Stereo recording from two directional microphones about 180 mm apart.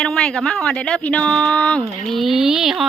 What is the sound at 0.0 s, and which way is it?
Speech, 5° left (ahead or behind).